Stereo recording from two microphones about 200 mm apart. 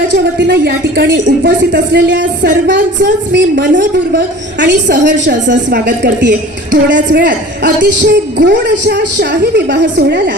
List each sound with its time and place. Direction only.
0.3 s speech: 60° right (ahead or behind)
7.3 s speech: 50° right (ahead or behind)